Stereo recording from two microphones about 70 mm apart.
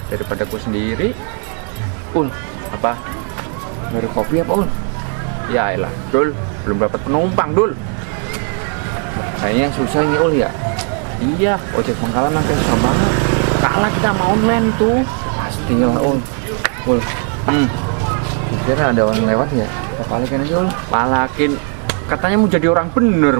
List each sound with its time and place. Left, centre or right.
3.9 s speech: right
9.1 s speech: right
16.6 s a sound: right
18.6 s speech: right